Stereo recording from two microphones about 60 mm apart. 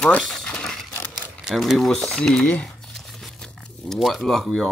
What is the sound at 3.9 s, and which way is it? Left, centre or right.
Speech, centre.